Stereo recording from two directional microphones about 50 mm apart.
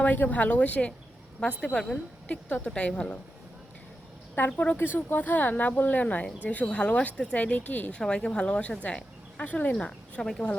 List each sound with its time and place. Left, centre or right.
0.0 s speech: left
4.4 s speech: left
4.9 s speech: left
7.9 s speech: centre; by 9.7 s left
9.8 s speech: centre